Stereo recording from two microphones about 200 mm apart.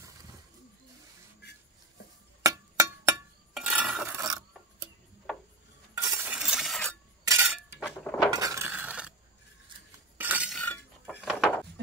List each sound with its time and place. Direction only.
2.4 s chink: 15° right (ahead or behind)
3.5 s stir: 5° right (ahead or behind)
4.2 s filing: 20° right (ahead or behind)
5.9 s stir: 15° right (ahead or behind)
7.2 s a sound: 10° right (ahead or behind)
8.0 s a sound: 5° left (ahead or behind)
8.3 s chink: 15° right (ahead or behind)
10.1 s cutlery: 10° right (ahead or behind)
11.1 s music: 5° right (ahead or behind)